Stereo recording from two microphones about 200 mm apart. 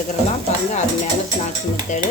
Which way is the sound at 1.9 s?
35° left (ahead or behind).